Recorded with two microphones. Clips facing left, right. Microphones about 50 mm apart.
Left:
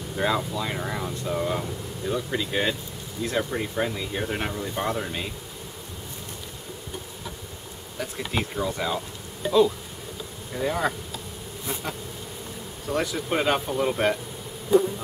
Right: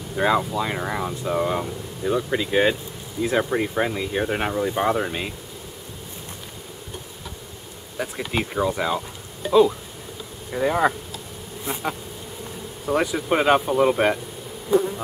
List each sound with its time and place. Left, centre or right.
0.1 s speech: centre
8.2 s speech: centre
9.4 s speech: centre
10.5 s speech: centre
11.6 s bee: right
12.8 s speech: centre